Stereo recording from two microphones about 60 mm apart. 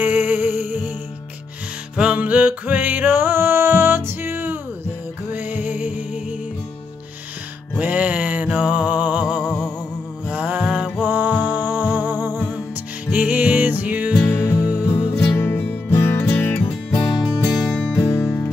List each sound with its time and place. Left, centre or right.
0.0 s music: right
2.0 s music: right
7.7 s music: right
9.4 s music: centre
10.2 s music: right
11.0 s music: right
14.9 s music: left
17.9 s music: left